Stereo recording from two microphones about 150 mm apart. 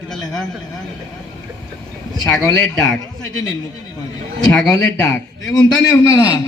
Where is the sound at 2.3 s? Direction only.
25° left (ahead or behind).